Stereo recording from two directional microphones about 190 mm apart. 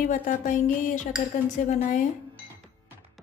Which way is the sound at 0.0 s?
40° left (ahead or behind).